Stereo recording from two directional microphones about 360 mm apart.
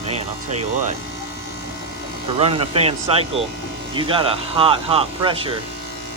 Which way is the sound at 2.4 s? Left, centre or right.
Centre.